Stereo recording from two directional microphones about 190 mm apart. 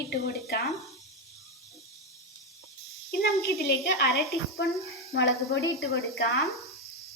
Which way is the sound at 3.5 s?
55° left (ahead or behind).